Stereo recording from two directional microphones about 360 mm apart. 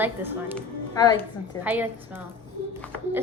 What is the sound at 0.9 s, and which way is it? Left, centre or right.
Speech, centre.